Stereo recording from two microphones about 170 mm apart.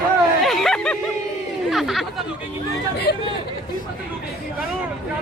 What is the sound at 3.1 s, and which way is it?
Speech, 70° left (ahead or behind).